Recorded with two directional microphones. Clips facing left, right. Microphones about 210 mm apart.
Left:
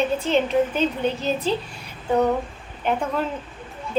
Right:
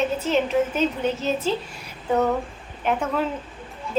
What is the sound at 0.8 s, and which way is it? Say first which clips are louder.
Speech: even; 30° left (ahead or behind).